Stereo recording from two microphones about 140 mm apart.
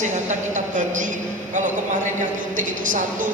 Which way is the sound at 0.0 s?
60° right (ahead or behind).